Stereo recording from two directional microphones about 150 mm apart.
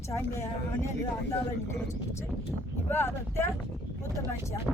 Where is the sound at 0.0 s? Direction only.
15° left (ahead or behind).